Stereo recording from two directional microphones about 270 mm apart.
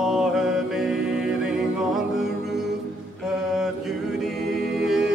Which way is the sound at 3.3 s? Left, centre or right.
Centre.